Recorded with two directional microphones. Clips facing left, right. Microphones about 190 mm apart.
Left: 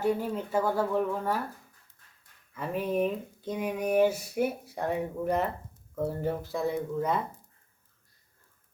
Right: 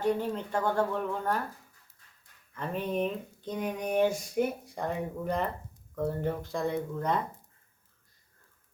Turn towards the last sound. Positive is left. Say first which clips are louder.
# left 1 dB
turn(degrees=5)  # may be behind; listen again after turning